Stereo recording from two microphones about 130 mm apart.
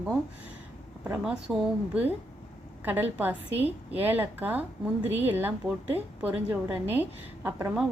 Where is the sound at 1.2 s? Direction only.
5° right (ahead or behind).